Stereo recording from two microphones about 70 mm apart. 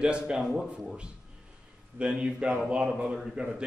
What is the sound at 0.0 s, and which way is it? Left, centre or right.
Speech, centre.